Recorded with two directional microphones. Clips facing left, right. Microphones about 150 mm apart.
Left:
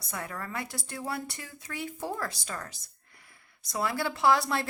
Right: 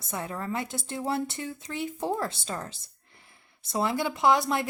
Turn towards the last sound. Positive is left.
turn(degrees=-20)  # may be behind; listen again after turning